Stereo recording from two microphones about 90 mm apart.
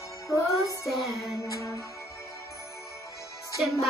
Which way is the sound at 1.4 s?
40° left (ahead or behind).